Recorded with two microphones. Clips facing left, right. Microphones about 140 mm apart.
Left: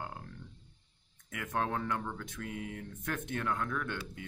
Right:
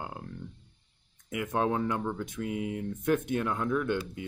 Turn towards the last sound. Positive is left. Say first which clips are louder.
# right 9 dB
turn(degrees=-15)  # may be behind; listen again after turning